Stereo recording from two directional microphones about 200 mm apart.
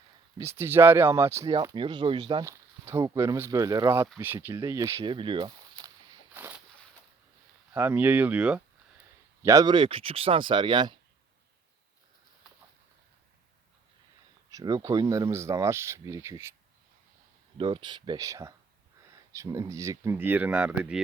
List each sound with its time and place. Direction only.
0.3 s speech: 10° right (ahead or behind)
6.3 s a sound: 10° right (ahead or behind)
7.7 s speech: 10° right (ahead or behind)
14.5 s speech: 20° right (ahead or behind)
17.6 s speech: 25° right (ahead or behind); by 21.0 s 5° right (ahead or behind)